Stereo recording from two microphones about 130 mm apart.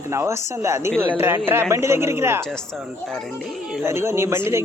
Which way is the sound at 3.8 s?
20° right (ahead or behind).